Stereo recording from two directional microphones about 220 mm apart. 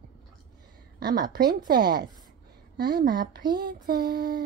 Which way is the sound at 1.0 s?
45° right (ahead or behind).